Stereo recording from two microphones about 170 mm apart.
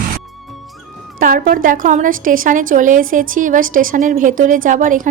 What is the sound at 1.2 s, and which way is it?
A woman's voice, 55° right (ahead or behind).